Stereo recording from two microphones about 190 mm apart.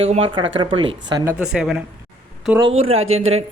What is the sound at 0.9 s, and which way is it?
Speech, 70° right (ahead or behind).